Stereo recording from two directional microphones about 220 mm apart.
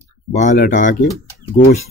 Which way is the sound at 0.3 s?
35° left (ahead or behind).